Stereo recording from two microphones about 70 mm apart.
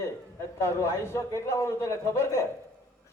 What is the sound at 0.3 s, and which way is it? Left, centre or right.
A man's voice, left.